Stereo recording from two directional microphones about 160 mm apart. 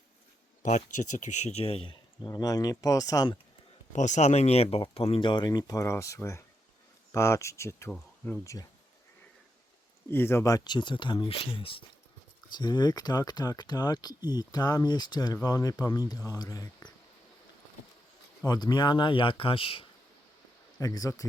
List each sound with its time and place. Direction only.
0.6 s speech: 50° left (ahead or behind); by 3.3 s 20° left (ahead or behind)
3.9 s speech: 50° left (ahead or behind); by 7.9 s 15° left (ahead or behind)
10.1 s speech: 15° left (ahead or behind)
18.4 s speech: 25° left (ahead or behind)
20.7 s speech: 20° left (ahead or behind)